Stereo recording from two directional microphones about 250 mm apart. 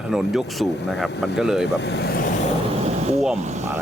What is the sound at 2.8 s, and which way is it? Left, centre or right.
Vehicle, right.